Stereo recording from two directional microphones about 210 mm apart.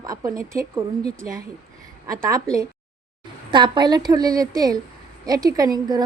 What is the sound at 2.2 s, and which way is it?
A woman's voice, 15° right (ahead or behind).